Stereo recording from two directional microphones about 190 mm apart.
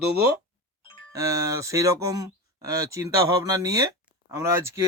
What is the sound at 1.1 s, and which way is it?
Speech, 20° right (ahead or behind).